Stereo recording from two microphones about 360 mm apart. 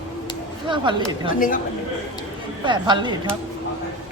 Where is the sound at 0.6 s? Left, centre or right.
Centre.